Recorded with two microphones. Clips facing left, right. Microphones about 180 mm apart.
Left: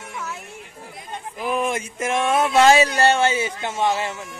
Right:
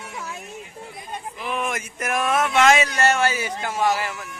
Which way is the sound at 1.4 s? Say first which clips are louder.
Left 5 dB; 35° left (ahead or behind).